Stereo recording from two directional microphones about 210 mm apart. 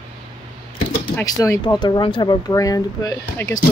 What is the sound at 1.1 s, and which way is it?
Speech, 15° left (ahead or behind).